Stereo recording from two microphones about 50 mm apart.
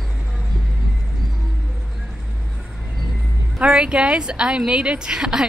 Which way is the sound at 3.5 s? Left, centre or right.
Centre.